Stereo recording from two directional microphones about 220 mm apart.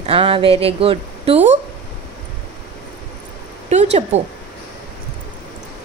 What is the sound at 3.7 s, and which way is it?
Speech, 30° right (ahead or behind).